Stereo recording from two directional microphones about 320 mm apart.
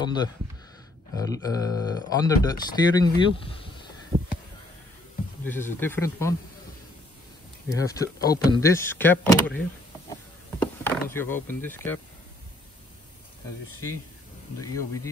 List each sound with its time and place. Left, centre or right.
0.0 s speech: centre
4.1 s a sound: centre
5.4 s speech: centre
7.7 s speech: centre
10.6 s speech: centre